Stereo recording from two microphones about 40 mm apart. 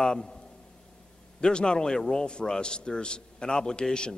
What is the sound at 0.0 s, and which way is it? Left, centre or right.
Speech, centre.